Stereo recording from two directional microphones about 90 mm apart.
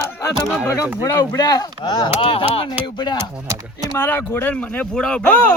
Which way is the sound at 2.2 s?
85° left.